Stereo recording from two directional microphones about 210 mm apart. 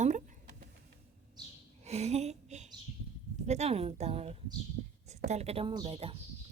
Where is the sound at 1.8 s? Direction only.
30° right (ahead or behind).